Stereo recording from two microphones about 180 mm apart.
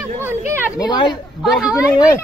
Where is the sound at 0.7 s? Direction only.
25° left (ahead or behind).